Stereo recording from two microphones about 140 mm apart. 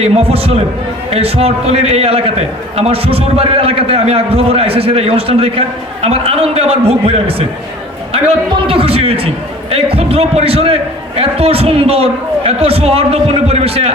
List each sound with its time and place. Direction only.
0.0 s a man's voice: 45° right (ahead or behind)
8.6 s a man's voice: 40° right (ahead or behind)